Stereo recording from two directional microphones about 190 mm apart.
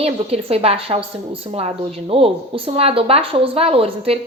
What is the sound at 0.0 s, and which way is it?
A woman's voice, 30° right (ahead or behind).